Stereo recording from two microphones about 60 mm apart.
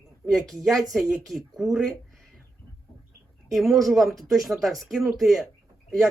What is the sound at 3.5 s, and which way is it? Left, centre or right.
A man's voice, centre.